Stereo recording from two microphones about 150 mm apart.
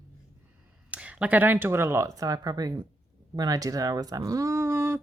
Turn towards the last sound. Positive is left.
turn(degrees=-15)  # may be behind; listen again after turning